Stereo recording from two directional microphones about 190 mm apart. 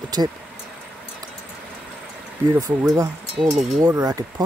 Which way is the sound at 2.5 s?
20° right (ahead or behind).